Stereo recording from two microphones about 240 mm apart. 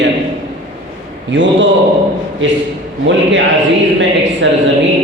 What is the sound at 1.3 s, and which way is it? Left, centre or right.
Speech, right.